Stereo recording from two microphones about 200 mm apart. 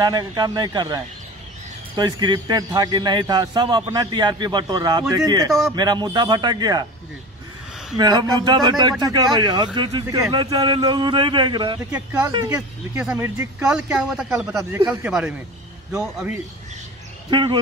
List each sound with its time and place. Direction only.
0.0 s speech: 20° right (ahead or behind)
5.5 s a man's voice: centre (ahead or behind)
5.8 s speech: 20° right (ahead or behind)
8.0 s speech: 20° right (ahead or behind)
11.9 s speech: 5° right (ahead or behind)
12.3 s speech: 20° right (ahead or behind)
12.5 s a man's voice: 5° right (ahead or behind)
17.3 s speech: 25° right (ahead or behind)